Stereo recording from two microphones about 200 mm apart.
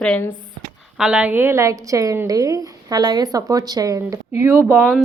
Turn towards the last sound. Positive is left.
turn(degrees=-15)  # may be behind; listen again after turning